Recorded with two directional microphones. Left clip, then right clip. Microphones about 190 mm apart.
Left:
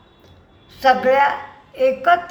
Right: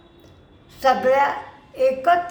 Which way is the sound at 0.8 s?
15° right (ahead or behind).